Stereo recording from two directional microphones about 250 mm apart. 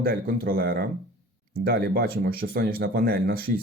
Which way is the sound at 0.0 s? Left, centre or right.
Right.